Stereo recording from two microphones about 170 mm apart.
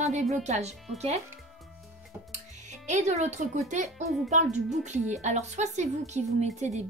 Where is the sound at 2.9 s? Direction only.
45° right (ahead or behind).